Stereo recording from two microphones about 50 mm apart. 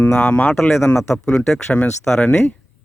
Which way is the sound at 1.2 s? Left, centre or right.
Centre.